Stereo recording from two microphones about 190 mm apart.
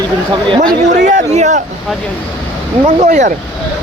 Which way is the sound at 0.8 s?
40° right (ahead or behind).